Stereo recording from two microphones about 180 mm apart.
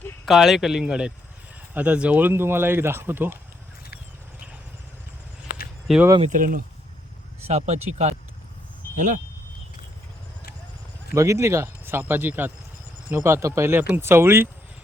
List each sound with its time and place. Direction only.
0.3 s speech: centre (ahead or behind)
6.2 s speech: 50° right (ahead or behind)
7.4 s speech: 40° right (ahead or behind)
11.1 s speech: 15° right (ahead or behind)